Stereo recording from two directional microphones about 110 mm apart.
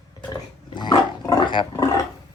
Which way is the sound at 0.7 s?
40° left (ahead or behind).